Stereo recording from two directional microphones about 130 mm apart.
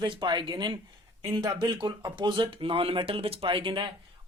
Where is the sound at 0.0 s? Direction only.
35° right (ahead or behind).